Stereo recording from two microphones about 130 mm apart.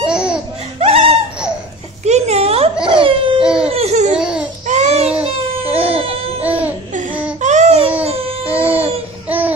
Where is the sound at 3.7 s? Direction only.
55° right (ahead or behind).